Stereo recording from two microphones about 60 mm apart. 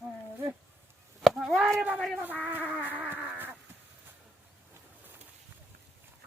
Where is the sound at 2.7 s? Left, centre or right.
Right.